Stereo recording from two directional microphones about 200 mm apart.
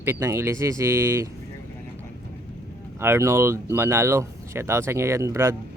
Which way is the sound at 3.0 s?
10° right (ahead or behind).